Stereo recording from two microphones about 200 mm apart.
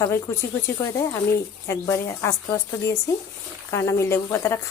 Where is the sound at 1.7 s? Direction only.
15° left (ahead or behind).